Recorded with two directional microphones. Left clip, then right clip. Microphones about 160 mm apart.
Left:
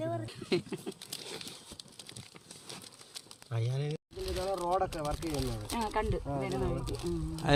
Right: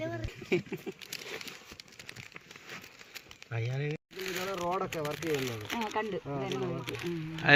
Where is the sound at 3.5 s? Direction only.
90° left.